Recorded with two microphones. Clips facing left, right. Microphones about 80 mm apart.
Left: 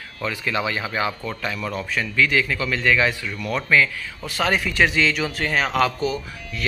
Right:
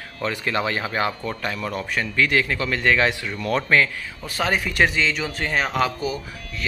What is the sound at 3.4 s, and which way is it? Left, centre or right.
Speech, right.